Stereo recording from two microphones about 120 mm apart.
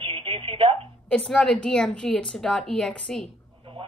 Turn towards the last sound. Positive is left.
turn(degrees=5)  # may be behind; listen again after turning